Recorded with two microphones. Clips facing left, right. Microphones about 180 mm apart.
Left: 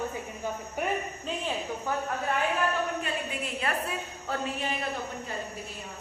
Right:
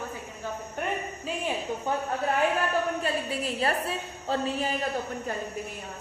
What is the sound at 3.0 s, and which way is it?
A woman's voice, 35° right (ahead or behind).